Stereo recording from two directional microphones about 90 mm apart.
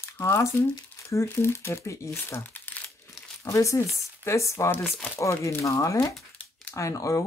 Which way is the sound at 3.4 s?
35° left (ahead or behind).